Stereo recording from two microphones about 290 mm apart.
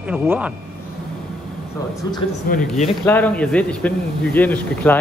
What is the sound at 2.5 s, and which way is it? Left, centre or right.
Speech, left.